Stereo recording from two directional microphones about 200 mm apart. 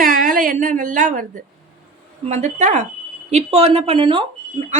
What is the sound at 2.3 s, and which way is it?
A woman's voice, 35° right (ahead or behind).